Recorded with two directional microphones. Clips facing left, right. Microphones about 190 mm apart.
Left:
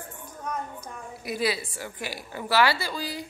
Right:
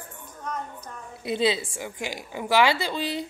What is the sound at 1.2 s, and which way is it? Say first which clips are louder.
A woman's voice: right 4 dB; 25° right (ahead or behind).